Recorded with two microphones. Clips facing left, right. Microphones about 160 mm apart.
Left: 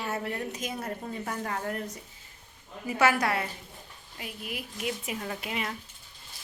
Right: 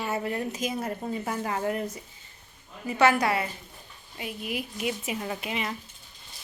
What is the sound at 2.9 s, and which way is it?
A woman's voice, 5° left (ahead or behind).